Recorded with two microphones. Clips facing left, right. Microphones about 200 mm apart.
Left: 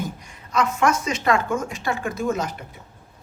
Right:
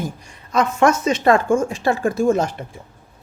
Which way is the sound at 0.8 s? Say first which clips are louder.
Right 5 dB; 30° right (ahead or behind).